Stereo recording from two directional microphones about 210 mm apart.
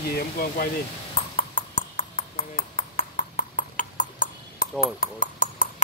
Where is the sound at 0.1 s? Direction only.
45° left (ahead or behind).